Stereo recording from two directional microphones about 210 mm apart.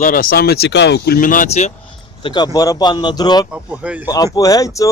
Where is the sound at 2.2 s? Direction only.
20° left (ahead or behind).